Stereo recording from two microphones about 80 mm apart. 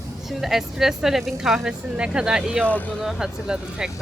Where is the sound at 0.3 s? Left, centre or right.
Centre.